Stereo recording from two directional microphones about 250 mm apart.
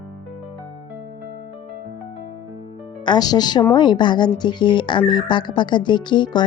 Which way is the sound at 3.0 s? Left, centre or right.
Centre.